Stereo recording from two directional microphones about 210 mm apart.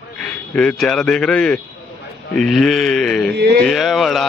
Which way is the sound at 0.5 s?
5° left (ahead or behind).